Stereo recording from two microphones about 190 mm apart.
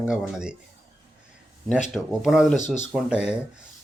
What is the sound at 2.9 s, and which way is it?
Speech, 5° right (ahead or behind).